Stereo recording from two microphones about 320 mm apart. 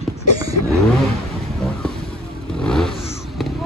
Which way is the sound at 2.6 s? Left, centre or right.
Centre.